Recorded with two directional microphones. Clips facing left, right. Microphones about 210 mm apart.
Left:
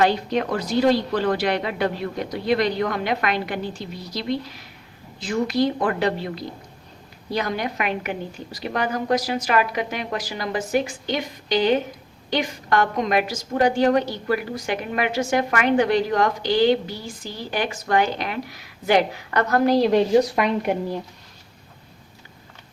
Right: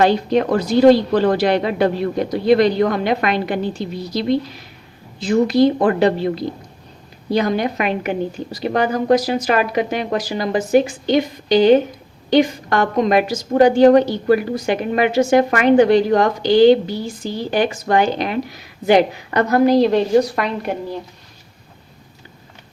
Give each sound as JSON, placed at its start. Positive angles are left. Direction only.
{"t": 0.0, "sound": "a woman's voice", "side_deg": -30}
{"t": 19.6, "sound": "a woman's voice", "side_deg": 5}